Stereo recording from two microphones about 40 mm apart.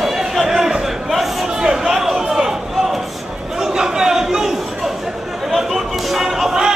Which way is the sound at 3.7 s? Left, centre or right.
Centre.